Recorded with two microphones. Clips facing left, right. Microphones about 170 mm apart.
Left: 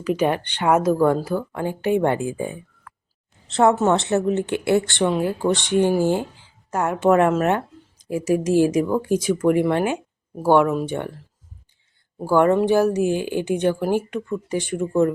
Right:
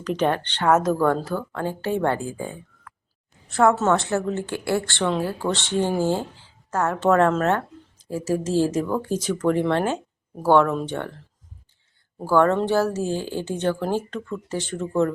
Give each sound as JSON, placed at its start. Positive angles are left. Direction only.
{"t": 0.0, "sound": "a woman's voice", "side_deg": 10}
{"t": 12.2, "sound": "a woman's voice", "side_deg": 15}